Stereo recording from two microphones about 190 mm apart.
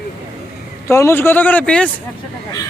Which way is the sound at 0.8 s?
15° left (ahead or behind).